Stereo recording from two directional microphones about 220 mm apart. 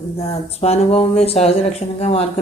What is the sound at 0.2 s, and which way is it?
Speech, 30° left (ahead or behind).